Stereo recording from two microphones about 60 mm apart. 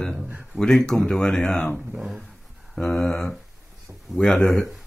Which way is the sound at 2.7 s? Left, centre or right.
Centre.